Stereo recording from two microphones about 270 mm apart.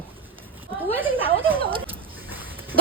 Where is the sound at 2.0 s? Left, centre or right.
Centre.